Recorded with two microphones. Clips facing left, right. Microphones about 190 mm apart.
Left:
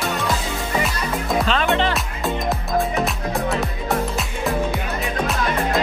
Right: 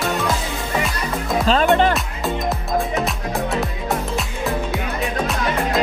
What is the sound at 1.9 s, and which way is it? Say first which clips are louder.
Music: right 1 dB; centre (ahead or behind).